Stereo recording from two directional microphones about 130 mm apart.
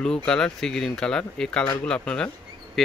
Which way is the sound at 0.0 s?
5° left (ahead or behind).